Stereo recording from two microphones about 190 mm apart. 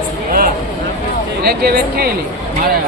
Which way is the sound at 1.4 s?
55° right (ahead or behind).